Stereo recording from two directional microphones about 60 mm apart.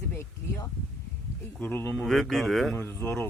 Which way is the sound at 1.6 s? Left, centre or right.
Left.